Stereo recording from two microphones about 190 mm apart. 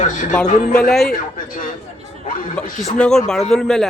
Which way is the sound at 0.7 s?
5° left (ahead or behind).